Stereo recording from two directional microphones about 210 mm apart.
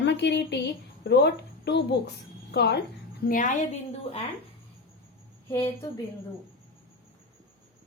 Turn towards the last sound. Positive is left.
turn(degrees=15)  # may be behind; listen again after turning